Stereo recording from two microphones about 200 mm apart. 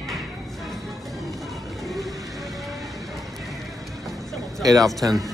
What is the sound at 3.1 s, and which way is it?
Music, centre (ahead or behind).